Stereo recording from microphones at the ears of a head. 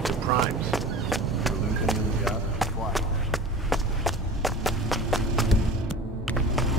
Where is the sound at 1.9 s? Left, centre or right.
Centre.